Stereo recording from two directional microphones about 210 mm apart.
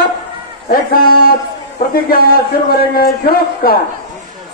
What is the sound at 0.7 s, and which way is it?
A man's voice, 45° left (ahead or behind).